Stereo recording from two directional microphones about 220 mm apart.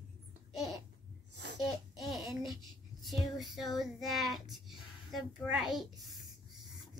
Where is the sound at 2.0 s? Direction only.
Centre (ahead or behind).